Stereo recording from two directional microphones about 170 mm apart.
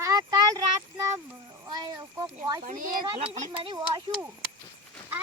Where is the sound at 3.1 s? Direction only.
35° right (ahead or behind).